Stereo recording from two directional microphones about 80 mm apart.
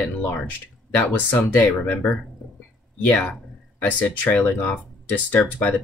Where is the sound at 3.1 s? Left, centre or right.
Centre.